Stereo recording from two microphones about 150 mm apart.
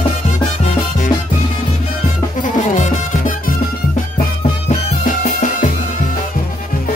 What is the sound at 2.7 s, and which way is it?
Music, 55° left (ahead or behind).